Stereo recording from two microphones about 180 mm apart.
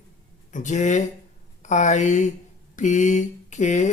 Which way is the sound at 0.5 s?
40° left (ahead or behind).